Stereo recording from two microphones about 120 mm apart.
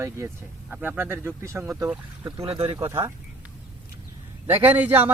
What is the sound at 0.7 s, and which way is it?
Speech, 15° right (ahead or behind).